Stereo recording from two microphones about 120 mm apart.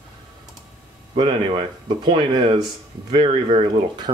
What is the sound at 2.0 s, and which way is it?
Speech, 40° right (ahead or behind).